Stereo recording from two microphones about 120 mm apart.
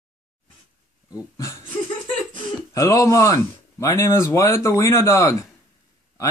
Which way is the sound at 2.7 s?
25° left (ahead or behind).